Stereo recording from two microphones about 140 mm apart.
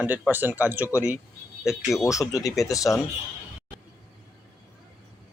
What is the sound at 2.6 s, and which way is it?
Speech, 25° left (ahead or behind).